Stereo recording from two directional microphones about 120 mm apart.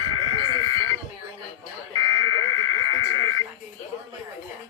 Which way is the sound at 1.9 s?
30° left (ahead or behind).